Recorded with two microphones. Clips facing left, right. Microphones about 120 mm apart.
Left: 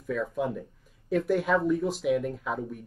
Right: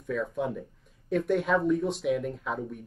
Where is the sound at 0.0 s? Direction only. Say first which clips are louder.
Left 1 dB; centre (ahead or behind).